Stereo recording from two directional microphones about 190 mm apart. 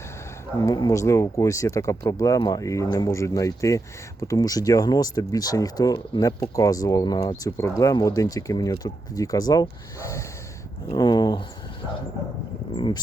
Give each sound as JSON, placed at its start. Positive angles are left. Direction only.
{"t": 0.6, "sound": "speech", "side_deg": 20}
{"t": 12.7, "sound": "speech", "side_deg": 25}